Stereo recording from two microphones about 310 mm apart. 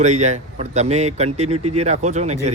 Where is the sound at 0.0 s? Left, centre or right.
Right.